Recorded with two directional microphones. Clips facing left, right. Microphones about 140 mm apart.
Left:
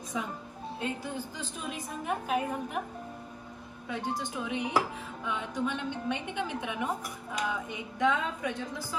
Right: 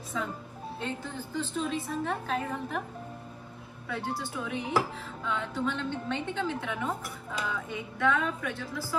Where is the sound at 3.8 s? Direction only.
15° left (ahead or behind).